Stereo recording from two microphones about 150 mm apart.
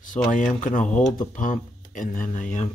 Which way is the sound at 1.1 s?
60° left (ahead or behind).